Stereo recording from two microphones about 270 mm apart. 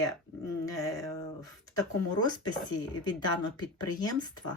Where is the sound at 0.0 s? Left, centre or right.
Centre.